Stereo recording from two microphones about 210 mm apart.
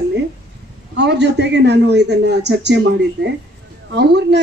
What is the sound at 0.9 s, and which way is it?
A man's voice, 55° right (ahead or behind).